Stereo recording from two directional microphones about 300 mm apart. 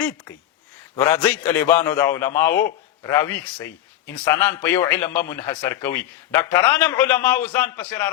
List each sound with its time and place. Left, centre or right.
0.9 s a man's voice: centre